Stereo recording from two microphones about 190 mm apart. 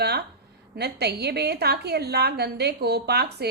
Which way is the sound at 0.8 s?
60° right (ahead or behind).